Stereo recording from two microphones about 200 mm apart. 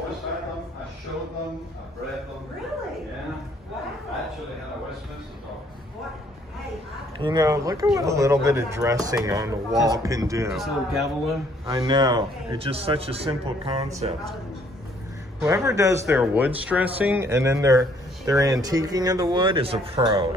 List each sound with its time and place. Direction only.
7.2 s speech: 20° right (ahead or behind)
10.5 s speech: centre (ahead or behind)
11.6 s a man's voice: 20° right (ahead or behind)
15.4 s speech: 15° right (ahead or behind)